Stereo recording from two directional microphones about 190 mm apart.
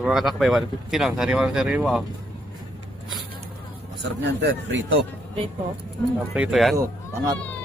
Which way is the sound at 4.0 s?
70° right (ahead or behind).